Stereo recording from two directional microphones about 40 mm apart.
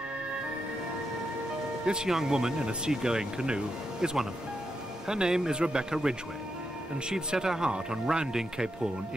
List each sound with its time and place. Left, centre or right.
2.0 s speech: centre
2.3 s speech: right